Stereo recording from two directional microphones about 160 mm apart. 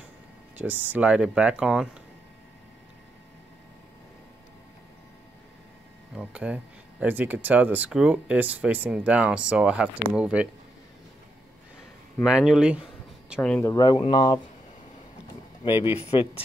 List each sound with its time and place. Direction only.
0.6 s speech: 10° right (ahead or behind)
6.1 s speech: 5° right (ahead or behind)
12.3 s speech: 5° right (ahead or behind)
13.4 s speech: 5° left (ahead or behind)
13.7 s speech: 25° left (ahead or behind)
15.7 s speech: 15° right (ahead or behind)
16.0 s speech: 40° left (ahead or behind)